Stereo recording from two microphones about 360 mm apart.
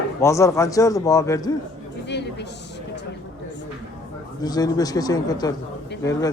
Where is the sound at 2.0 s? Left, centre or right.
Left.